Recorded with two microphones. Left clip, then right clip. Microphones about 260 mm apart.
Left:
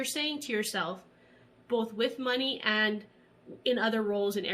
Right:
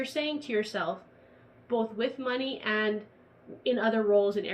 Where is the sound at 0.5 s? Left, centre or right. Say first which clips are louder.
Right 4 dB; left.